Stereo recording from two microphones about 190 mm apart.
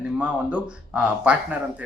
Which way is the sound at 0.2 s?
5° right (ahead or behind).